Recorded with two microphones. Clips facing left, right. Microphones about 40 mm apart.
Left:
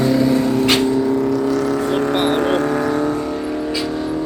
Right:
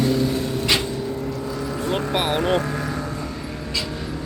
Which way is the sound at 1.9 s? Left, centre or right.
Centre.